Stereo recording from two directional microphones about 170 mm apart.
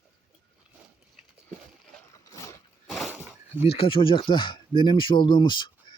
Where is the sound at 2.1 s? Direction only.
20° left (ahead or behind).